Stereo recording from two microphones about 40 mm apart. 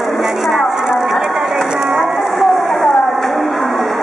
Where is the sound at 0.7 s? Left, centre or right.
Centre.